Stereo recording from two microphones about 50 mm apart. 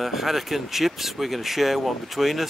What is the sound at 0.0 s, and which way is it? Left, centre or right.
Speech, centre.